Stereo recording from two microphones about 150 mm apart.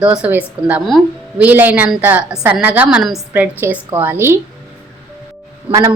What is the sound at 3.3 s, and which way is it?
A woman's voice, 15° right (ahead or behind).